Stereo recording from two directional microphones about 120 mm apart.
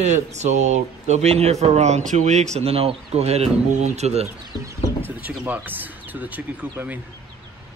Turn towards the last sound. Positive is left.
turn(degrees=-15)  # may be behind; listen again after turning